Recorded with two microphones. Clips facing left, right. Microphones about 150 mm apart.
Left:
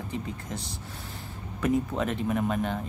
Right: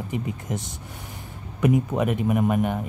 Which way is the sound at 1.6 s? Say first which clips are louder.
Right 5 dB; 15° right (ahead or behind).